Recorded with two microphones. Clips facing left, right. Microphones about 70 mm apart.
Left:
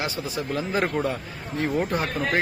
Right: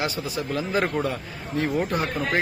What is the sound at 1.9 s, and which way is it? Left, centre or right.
Speech, left.